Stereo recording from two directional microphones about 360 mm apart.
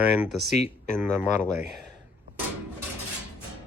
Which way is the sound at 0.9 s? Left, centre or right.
Centre.